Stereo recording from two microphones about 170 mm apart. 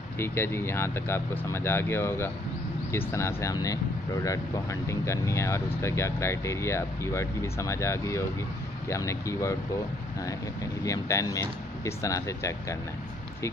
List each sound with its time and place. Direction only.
0.2 s speech: 15° left (ahead or behind)
10.8 s speech: 20° left (ahead or behind)